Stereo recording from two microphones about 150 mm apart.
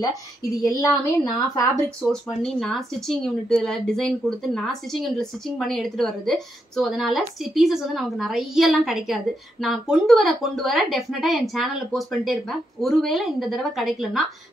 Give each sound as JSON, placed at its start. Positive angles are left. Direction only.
{"t": 0.7, "sound": "a woman's voice", "side_deg": 25}
{"t": 2.0, "sound": "a woman's voice", "side_deg": 0}